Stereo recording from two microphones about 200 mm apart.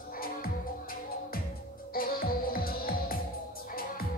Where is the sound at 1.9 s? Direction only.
45° left (ahead or behind).